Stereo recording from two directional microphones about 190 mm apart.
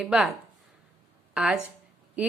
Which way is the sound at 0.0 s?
5° right (ahead or behind).